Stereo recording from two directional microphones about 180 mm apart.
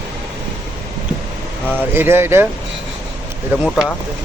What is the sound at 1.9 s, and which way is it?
Speech, 10° right (ahead or behind).